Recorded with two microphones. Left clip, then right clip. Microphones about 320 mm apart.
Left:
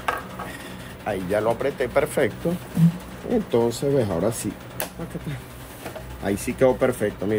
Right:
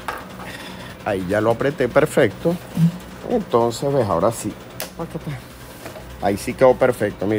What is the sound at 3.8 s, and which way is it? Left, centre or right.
Speech, centre.